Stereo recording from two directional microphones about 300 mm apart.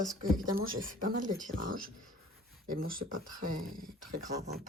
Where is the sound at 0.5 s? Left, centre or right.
Right.